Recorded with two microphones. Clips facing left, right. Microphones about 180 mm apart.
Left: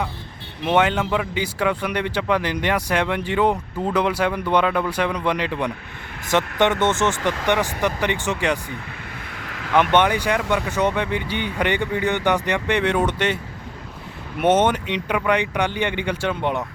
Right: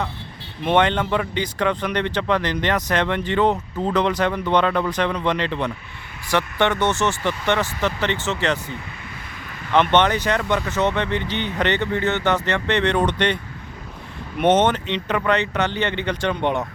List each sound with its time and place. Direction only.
0.6 s a man's voice: 5° left (ahead or behind)
9.4 s vehicle: 75° left (ahead or behind)
9.7 s a man's voice: 10° left (ahead or behind)
14.4 s a man's voice: 10° left (ahead or behind)